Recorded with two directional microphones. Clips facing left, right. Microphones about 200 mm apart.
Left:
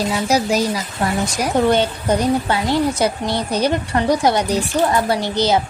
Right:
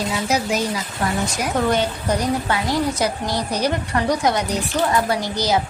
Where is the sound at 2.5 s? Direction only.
25° left (ahead or behind).